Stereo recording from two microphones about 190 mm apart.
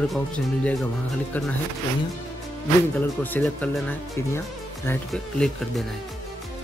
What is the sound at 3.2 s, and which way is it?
Speech, 10° left (ahead or behind).